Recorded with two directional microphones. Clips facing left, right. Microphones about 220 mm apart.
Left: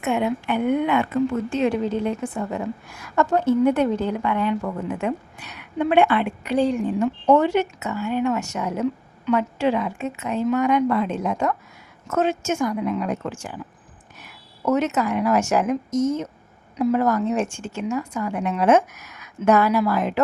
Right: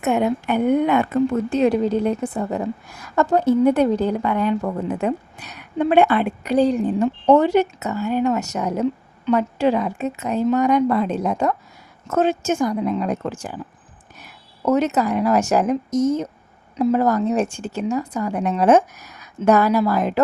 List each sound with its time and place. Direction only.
0.0 s a woman's voice: 40° right (ahead or behind)